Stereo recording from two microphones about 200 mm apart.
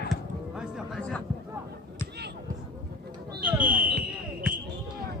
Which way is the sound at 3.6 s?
45° right (ahead or behind).